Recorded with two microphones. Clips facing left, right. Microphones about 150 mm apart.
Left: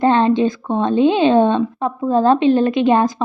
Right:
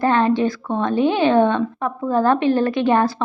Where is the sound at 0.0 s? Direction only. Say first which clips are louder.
Left 3 dB; 25° left (ahead or behind).